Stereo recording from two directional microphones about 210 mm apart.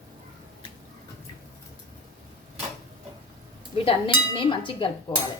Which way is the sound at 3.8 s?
25° left (ahead or behind).